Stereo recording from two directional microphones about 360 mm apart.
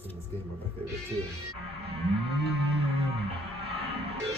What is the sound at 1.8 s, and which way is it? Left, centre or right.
Music, centre.